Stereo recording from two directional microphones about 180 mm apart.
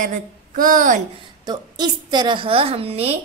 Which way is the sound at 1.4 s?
25° right (ahead or behind).